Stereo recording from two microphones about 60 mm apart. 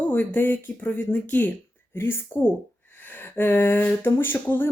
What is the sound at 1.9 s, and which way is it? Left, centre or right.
Speech, left.